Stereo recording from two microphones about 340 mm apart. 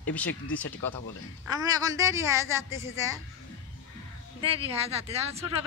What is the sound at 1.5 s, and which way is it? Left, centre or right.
A woman's voice, centre.